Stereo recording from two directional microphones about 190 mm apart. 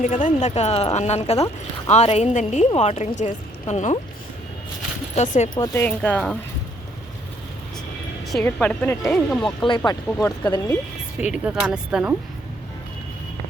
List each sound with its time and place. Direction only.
0.0 s a woman's voice: 40° left (ahead or behind)
5.1 s a woman's voice: 35° left (ahead or behind)
5.5 s speech: 15° left (ahead or behind)
8.3 s speech: 5° left (ahead or behind)
9.6 s speech: 25° left (ahead or behind)
11.2 s speech: 5° right (ahead or behind)